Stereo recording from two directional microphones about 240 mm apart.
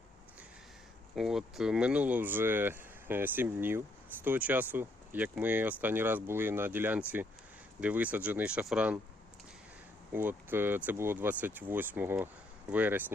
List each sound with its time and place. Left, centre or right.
1.1 s speech: centre
10.1 s speech: centre